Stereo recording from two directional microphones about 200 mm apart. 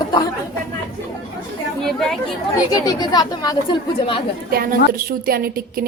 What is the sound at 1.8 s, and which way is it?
Speech, centre (ahead or behind).